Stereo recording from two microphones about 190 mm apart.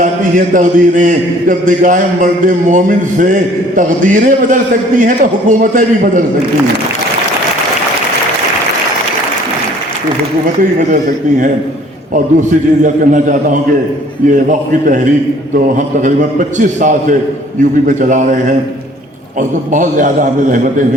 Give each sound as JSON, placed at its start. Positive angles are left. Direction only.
{"t": 0.0, "sound": "a man's voice", "side_deg": -45}
{"t": 12.1, "sound": "a man's voice", "side_deg": -45}